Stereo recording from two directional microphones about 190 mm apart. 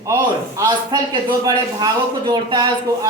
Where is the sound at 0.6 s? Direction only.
20° right (ahead or behind).